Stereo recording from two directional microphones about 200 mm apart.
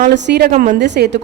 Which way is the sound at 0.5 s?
40° right (ahead or behind).